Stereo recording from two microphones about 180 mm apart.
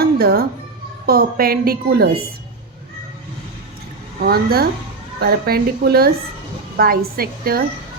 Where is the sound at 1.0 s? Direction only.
60° right (ahead or behind).